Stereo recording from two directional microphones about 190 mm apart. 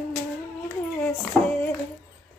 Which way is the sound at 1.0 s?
5° left (ahead or behind).